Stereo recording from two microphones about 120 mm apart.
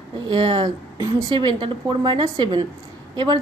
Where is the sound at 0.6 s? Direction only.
30° right (ahead or behind).